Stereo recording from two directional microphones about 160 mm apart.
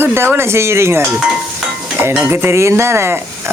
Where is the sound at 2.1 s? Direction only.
10° right (ahead or behind).